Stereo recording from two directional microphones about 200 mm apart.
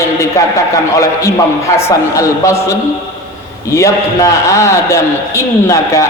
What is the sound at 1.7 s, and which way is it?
Speech, 15° left (ahead or behind).